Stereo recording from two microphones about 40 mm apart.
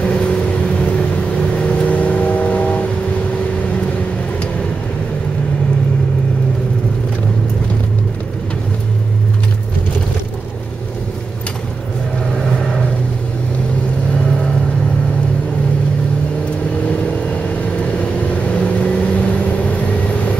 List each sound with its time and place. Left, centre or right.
0.0 s vehicle: left
17.9 s vehicle: left